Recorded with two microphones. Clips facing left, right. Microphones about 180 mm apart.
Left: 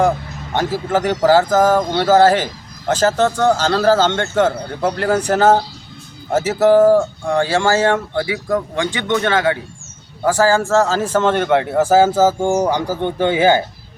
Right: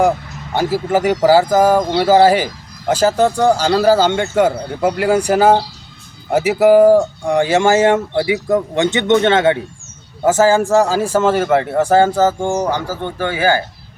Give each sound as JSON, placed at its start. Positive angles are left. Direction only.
{"t": 0.5, "sound": "speech", "side_deg": -10}